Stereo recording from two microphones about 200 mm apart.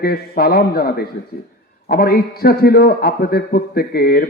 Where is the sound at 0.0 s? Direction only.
50° left (ahead or behind).